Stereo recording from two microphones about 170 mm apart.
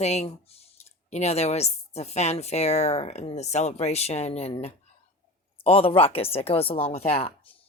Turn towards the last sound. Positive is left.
turn(degrees=35)  # may be behind; listen again after turning